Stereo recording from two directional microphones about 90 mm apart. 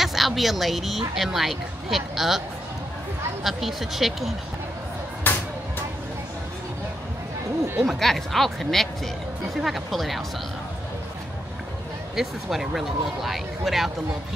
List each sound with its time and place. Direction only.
0.0 s a woman's voice: centre (ahead or behind)
3.4 s a woman's voice: centre (ahead or behind)
5.2 s a sound: 20° left (ahead or behind)
7.8 s a woman's voice: centre (ahead or behind)
12.2 s a woman's voice: 5° right (ahead or behind)